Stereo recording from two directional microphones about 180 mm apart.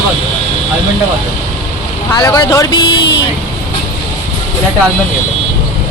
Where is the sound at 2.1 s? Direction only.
15° left (ahead or behind).